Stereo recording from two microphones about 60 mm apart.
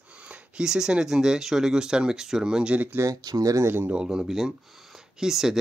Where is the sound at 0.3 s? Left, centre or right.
Centre.